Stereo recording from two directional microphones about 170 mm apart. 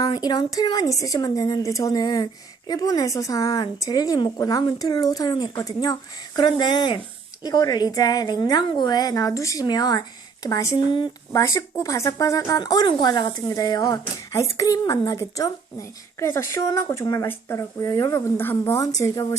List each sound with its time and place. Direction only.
0.0 s a woman's voice: 25° left (ahead or behind)